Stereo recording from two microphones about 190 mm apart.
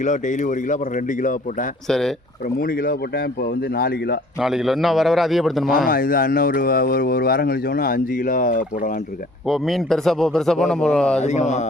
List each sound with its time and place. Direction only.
0.0 s speech: 40° left (ahead or behind)
1.9 s speech: centre (ahead or behind)
2.6 s speech: 50° left (ahead or behind)
4.4 s speech: centre (ahead or behind)
5.9 s speech: 50° left (ahead or behind)
9.5 s speech: centre (ahead or behind)
11.2 s speech: 35° left (ahead or behind)